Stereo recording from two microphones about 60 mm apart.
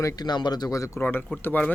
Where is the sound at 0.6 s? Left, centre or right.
Left.